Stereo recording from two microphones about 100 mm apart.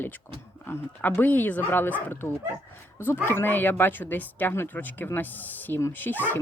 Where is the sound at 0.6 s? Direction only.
20° left (ahead or behind).